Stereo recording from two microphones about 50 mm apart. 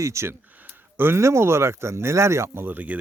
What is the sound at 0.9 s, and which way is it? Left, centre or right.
Speech, right.